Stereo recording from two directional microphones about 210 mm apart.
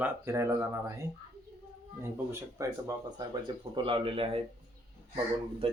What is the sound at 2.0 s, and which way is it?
Speech, 15° right (ahead or behind).